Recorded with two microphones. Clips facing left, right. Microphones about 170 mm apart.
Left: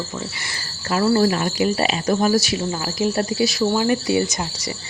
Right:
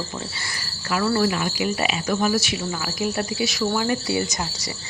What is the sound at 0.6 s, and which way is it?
Cricket, 30° left (ahead or behind).